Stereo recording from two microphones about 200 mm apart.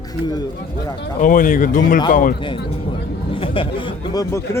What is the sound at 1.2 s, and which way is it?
Speech, 40° left (ahead or behind).